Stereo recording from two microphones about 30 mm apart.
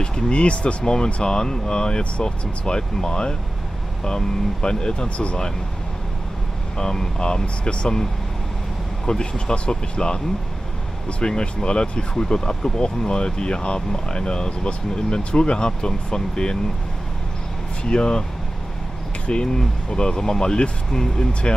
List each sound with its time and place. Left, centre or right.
0.3 s speech: left
0.8 s speech: left
5.0 s speech: left
6.8 s speech: left
9.2 s speech: left
17.8 s speech: left
19.4 s speech: left
21.3 s speech: left